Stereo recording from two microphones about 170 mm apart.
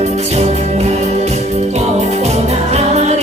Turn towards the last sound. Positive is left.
turn(degrees=-40)  # may be behind; listen again after turning